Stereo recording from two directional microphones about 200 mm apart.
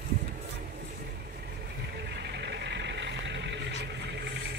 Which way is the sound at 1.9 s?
55° right (ahead or behind).